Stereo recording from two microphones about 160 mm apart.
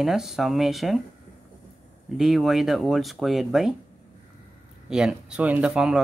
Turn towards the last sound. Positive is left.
turn(degrees=-5)  # may be behind; listen again after turning